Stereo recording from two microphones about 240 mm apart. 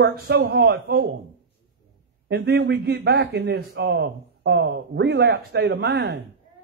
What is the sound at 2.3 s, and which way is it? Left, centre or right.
A man's voice, right.